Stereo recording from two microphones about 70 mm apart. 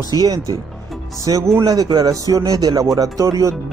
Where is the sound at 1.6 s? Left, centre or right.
Right.